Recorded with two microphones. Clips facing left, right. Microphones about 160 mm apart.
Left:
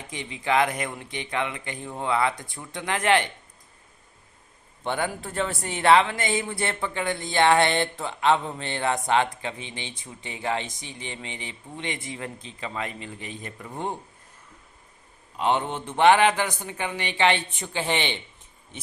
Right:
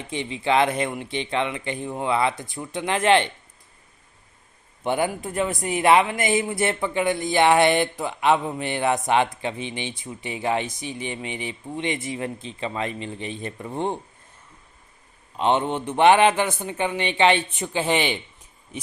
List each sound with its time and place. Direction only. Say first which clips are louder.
0.1 s speech: right 3 dB; 20° right (ahead or behind)
4.8 s speech: right 4 dB; 15° right (ahead or behind)
6.1 s speech: right 5 dB; 25° left (ahead or behind)
6.5 s speech: right 5 dB; 20° right (ahead or behind)
15.4 s speech: right 3 dB; 20° right (ahead or behind)